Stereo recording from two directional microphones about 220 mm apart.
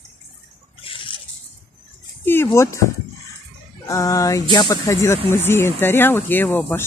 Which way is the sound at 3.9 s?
15° left (ahead or behind).